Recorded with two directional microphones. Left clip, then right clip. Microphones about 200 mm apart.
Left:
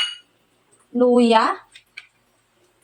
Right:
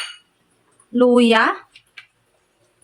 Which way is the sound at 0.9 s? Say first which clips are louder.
Right 2 dB; 30° right (ahead or behind).